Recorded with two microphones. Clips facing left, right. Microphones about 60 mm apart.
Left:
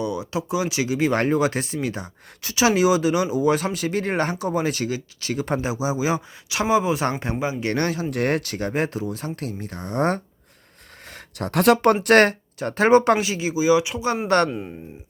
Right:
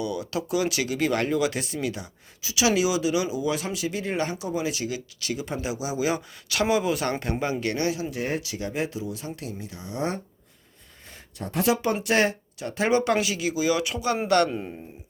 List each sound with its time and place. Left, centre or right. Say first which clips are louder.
0.0 s speech: left 3 dB; left
1.2 s speech: left 4 dB; left
5.7 s speech: even; left
7.7 s speech: left 3 dB; left
8.1 s speech: left 6 dB; left
11.1 s speech: left 6 dB; left
12.5 s speech: left 8 dB; left
13.1 s speech: left 2 dB; left
14.3 s speech: left 2 dB; left